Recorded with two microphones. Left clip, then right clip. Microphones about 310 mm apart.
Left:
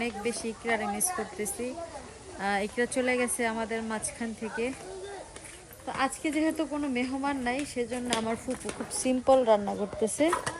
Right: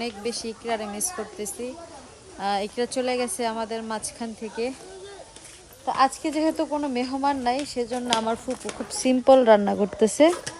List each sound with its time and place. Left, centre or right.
0.0 s speech: centre
5.8 s speech: centre